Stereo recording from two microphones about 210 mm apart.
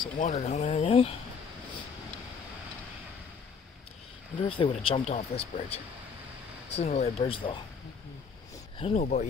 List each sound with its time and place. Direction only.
0.0 s speech: 35° left (ahead or behind)
4.4 s speech: 25° left (ahead or behind)
6.8 s speech: 30° left (ahead or behind)
8.7 s speech: 30° left (ahead or behind)